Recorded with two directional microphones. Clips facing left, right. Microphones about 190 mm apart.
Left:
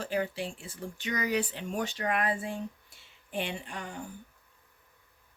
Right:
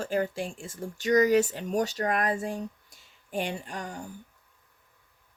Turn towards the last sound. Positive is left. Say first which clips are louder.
# right 3 dB
turn(degrees=-40)  # may be behind; listen again after turning